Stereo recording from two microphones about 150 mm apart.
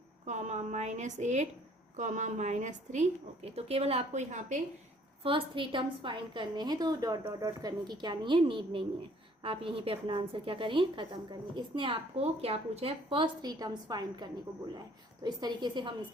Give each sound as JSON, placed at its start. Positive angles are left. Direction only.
{"t": 0.3, "sound": "a woman's voice", "side_deg": -50}
{"t": 5.2, "sound": "a woman's voice", "side_deg": -35}